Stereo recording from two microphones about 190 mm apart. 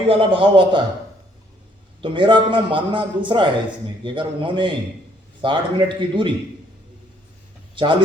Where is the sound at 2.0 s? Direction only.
25° right (ahead or behind).